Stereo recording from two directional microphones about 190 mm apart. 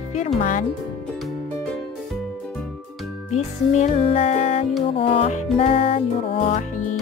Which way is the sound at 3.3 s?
35° left (ahead or behind).